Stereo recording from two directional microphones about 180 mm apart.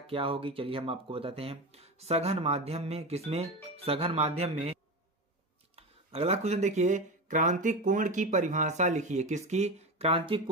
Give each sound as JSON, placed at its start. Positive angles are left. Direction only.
{"t": 0.0, "sound": "speech", "side_deg": -30}
{"t": 5.8, "sound": "speech", "side_deg": -35}